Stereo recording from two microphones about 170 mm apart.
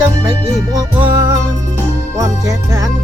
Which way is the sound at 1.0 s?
25° right (ahead or behind).